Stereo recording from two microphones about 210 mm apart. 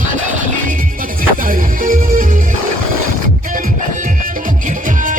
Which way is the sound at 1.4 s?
40° right (ahead or behind).